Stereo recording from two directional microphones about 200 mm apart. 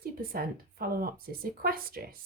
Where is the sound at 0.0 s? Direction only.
45° right (ahead or behind).